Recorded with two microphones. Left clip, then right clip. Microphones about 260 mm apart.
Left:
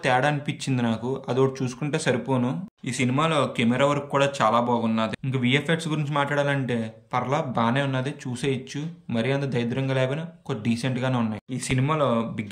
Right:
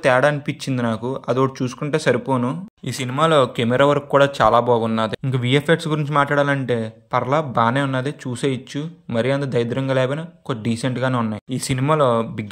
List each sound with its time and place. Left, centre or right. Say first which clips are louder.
0.0 s speech: right 6 dB; centre